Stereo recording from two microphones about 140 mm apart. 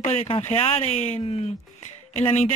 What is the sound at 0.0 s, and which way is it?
Speech, 50° left (ahead or behind).